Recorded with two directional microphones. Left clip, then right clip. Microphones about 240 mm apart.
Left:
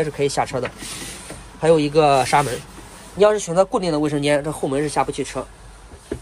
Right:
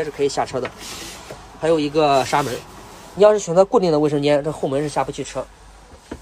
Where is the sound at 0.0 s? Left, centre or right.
Centre.